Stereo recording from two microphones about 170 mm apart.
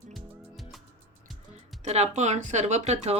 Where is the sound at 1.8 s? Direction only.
40° right (ahead or behind).